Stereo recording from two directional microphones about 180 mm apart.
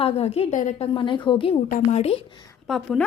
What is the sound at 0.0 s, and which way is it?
Speech, 35° left (ahead or behind).